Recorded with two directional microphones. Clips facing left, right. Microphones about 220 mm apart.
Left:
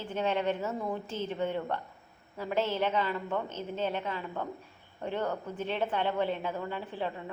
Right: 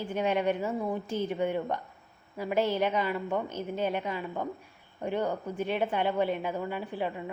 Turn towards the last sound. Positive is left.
turn(degrees=-10)  # may be behind; listen again after turning